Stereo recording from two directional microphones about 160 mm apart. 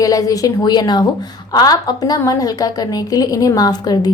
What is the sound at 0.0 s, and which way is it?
A woman's voice, 20° left (ahead or behind).